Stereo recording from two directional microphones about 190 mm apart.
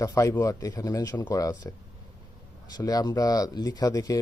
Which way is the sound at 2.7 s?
20° left (ahead or behind).